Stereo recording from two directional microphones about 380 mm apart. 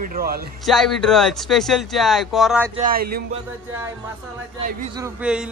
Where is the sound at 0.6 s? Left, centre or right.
Centre.